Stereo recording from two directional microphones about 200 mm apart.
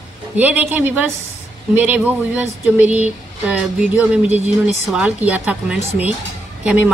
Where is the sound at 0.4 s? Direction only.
10° right (ahead or behind).